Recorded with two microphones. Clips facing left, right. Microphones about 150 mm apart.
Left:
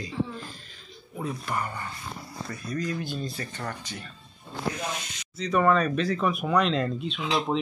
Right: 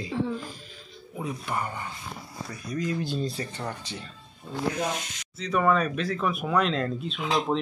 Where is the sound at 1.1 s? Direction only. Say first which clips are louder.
Even; 15° right (ahead or behind).